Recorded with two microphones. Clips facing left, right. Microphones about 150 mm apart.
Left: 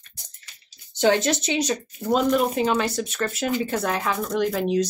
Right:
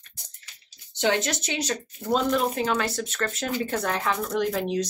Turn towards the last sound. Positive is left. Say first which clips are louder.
# left 3 dB
turn(degrees=0)  # may be behind; listen again after turning